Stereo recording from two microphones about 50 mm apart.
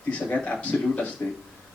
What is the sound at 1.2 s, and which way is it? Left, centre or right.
Speech, left.